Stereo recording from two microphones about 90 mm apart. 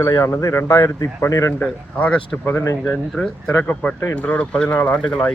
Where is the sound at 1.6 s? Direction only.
15° left (ahead or behind).